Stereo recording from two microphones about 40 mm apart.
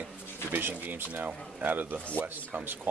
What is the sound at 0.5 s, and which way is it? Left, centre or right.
Speech, right.